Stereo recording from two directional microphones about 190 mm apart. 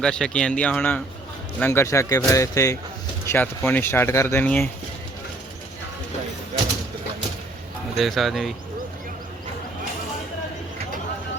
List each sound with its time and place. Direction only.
0.0 s speech: 5° left (ahead or behind)
7.9 s speech: centre (ahead or behind)